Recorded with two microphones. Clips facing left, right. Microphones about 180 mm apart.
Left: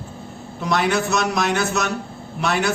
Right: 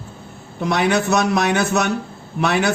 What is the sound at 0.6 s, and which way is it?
A man's voice, 60° right (ahead or behind).